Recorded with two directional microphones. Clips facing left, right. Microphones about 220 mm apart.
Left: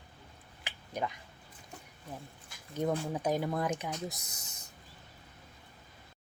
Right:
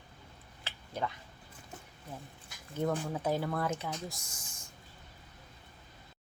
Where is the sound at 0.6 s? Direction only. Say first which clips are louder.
Left 1 dB; 15° left (ahead or behind).